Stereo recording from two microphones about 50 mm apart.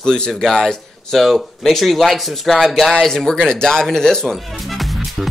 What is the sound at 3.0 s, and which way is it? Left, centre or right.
Speech, centre.